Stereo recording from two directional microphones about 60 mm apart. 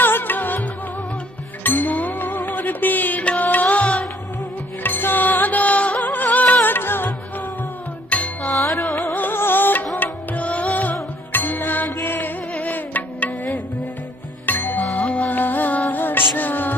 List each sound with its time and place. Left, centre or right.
0.0 s music: left
4.8 s music: left
8.1 s music: left